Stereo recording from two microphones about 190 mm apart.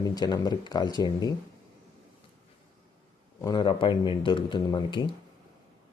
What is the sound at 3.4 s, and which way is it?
Speech, 20° left (ahead or behind).